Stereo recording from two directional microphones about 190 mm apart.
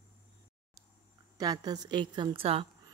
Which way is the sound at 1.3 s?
20° right (ahead or behind).